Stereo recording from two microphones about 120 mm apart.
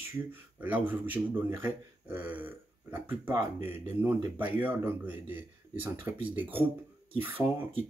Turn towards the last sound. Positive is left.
turn(degrees=-15)  # may be behind; listen again after turning